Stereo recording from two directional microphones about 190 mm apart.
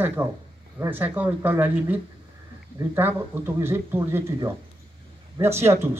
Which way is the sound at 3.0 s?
10° right (ahead or behind).